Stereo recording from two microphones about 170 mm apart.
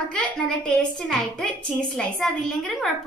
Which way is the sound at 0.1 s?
5° left (ahead or behind).